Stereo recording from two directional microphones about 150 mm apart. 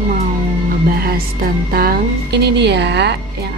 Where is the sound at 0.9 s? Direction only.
90° right.